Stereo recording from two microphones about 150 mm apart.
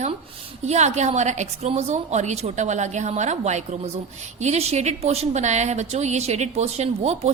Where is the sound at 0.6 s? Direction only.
50° right (ahead or behind).